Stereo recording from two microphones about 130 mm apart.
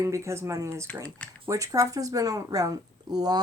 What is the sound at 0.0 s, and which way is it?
Speech, 20° right (ahead or behind).